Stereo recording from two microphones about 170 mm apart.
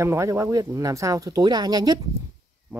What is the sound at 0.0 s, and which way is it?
Speech, 15° right (ahead or behind).